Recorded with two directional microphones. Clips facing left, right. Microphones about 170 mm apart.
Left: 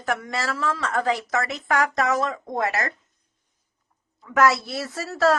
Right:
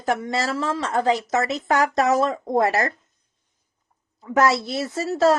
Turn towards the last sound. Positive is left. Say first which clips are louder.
# right 3 dB
turn(degrees=-20)  # may be behind; listen again after turning